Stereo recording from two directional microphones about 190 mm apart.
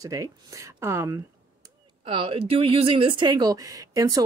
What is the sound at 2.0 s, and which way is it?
Speech, 25° right (ahead or behind).